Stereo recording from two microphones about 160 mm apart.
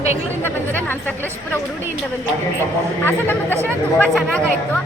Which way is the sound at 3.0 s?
10° left (ahead or behind).